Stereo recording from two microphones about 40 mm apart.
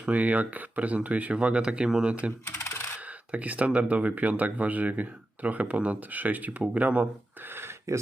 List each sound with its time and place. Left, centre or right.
0.0 s speech: right
2.4 s typing: left
3.3 s speech: right